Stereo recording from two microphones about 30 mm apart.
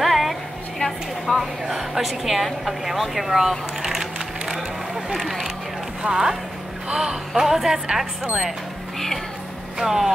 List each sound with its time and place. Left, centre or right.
0.0 s a sound: centre
1.4 s speech: centre
3.3 s a sound: centre
6.0 s speech: centre
7.3 s speech: centre
9.8 s speech: centre